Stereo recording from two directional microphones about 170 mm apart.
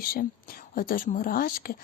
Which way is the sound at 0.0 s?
60° left (ahead or behind).